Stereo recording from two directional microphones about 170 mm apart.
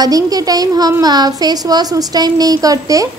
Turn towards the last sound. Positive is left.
turn(degrees=-20)  # may be behind; listen again after turning